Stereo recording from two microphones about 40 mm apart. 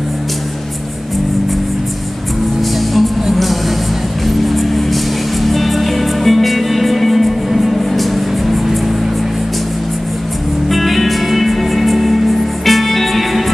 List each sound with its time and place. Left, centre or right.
2.9 s music: centre
10.7 s music: centre